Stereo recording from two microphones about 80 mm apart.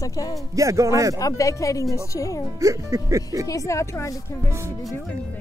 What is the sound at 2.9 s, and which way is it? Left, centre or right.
Speech, right.